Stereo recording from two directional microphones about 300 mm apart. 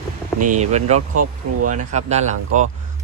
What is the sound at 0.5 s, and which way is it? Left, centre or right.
Speech, right.